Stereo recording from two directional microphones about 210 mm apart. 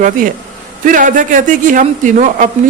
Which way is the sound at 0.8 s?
40° right (ahead or behind).